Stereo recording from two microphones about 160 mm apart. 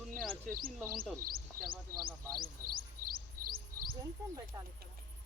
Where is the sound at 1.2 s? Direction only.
65° right (ahead or behind).